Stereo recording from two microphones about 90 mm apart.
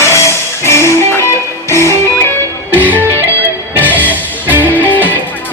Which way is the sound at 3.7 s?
20° right (ahead or behind).